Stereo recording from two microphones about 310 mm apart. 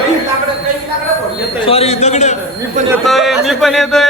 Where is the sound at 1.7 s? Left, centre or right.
Centre.